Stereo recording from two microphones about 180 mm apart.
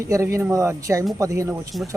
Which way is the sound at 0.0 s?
15° right (ahead or behind).